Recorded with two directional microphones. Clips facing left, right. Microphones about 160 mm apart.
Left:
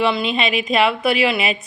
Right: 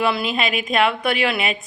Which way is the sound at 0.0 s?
5° right (ahead or behind).